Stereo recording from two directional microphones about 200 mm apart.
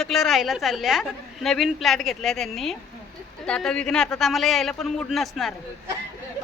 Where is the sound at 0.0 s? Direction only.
Centre (ahead or behind).